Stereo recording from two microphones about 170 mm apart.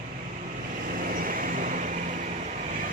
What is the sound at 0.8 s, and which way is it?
Vehicle, 55° right (ahead or behind).